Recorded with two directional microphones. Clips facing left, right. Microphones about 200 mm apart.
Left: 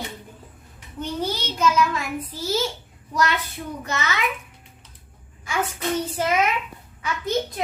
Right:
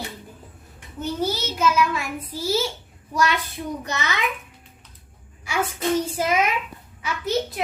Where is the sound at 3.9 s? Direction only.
15° right (ahead or behind).